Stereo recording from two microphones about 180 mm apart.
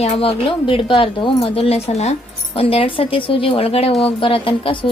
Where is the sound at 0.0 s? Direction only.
30° left (ahead or behind).